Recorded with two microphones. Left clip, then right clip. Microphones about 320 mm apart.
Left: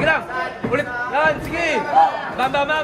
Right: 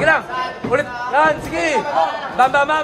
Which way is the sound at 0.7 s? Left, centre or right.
Right.